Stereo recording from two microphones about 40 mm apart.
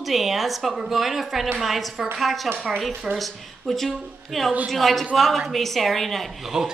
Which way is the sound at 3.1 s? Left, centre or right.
Centre.